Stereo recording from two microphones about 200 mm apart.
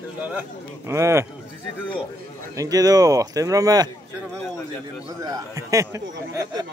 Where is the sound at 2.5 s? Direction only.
15° right (ahead or behind).